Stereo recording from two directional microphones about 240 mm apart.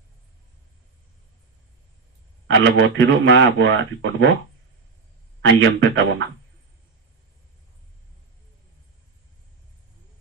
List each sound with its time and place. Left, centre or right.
2.5 s speech: right
5.6 s speech: right